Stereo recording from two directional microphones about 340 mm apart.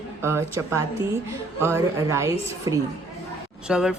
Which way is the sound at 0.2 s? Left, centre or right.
Centre.